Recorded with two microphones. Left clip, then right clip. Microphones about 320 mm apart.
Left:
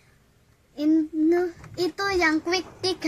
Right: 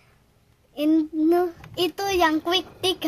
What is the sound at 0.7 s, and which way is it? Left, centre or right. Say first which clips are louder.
Child singing: right 1 dB; right.